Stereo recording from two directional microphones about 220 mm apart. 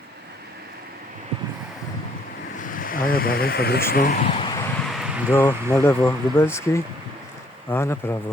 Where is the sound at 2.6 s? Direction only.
40° left (ahead or behind).